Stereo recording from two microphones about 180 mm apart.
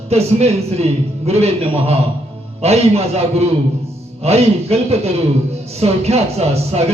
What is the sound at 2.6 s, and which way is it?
Speech, 35° right (ahead or behind).